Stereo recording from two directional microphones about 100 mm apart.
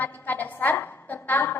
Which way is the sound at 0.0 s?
20° left (ahead or behind).